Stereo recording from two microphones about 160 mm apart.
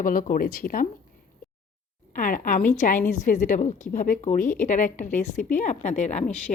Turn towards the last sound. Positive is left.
turn(degrees=45)  # may be behind; listen again after turning